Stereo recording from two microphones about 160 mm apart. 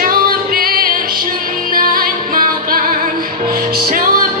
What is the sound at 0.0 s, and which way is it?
Music, 65° right (ahead or behind).